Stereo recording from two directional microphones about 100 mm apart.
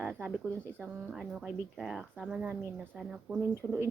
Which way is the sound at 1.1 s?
5° right (ahead or behind).